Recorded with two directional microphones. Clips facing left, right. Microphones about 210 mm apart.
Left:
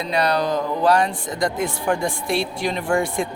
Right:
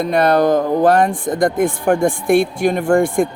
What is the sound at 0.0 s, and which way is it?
Speech, 50° right (ahead or behind).